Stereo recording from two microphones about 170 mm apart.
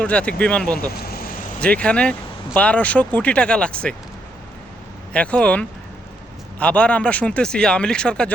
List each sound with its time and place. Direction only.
0.0 s speech: 5° left (ahead or behind)
0.9 s vehicle: 65° left (ahead or behind)
1.6 s speech: 5° left (ahead or behind)
5.1 s speech: 5° left (ahead or behind)